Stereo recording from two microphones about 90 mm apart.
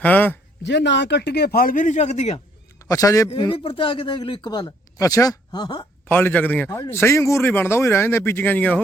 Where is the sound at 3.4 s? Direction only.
75° left (ahead or behind); by 4.7 s 50° left (ahead or behind).